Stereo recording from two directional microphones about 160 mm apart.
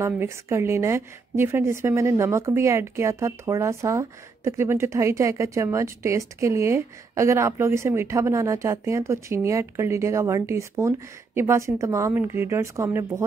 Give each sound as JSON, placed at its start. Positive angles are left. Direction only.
{"t": 0.0, "sound": "a woman's voice", "side_deg": -15}